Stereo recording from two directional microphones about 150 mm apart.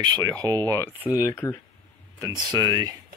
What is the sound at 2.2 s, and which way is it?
Speech, 25° right (ahead or behind).